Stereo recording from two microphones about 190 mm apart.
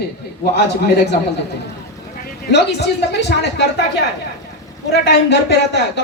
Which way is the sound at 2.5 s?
60° left (ahead or behind).